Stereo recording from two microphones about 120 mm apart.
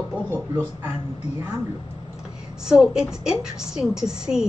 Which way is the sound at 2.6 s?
5° right (ahead or behind).